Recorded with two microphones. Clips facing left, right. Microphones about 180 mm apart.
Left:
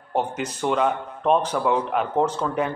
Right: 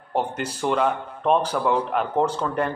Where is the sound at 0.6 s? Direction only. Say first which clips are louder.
Even; centre (ahead or behind).